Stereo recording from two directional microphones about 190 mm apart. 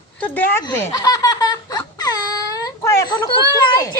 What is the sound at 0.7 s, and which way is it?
Laughter, 20° left (ahead or behind).